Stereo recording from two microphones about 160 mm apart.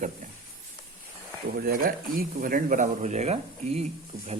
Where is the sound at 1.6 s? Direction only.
65° right (ahead or behind).